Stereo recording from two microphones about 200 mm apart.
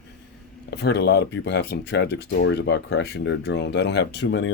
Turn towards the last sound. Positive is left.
turn(degrees=60)  # may be behind; listen again after turning